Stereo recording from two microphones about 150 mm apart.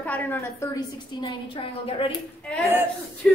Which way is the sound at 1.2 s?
35° left (ahead or behind).